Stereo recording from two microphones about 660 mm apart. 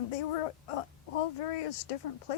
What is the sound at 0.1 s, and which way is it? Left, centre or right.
Speech, left.